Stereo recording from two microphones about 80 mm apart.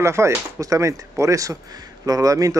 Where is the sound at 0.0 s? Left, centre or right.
Right.